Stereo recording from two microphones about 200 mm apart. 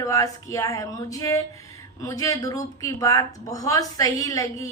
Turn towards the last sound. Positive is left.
turn(degrees=15)  # may be behind; listen again after turning